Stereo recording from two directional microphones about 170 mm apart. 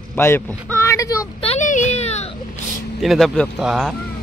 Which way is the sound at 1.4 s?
40° left (ahead or behind).